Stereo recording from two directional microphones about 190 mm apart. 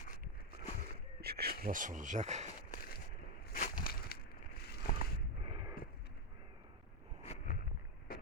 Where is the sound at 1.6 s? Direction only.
45° right (ahead or behind).